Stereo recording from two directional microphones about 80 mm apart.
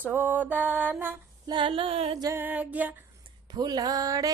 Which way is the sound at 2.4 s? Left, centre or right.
Right.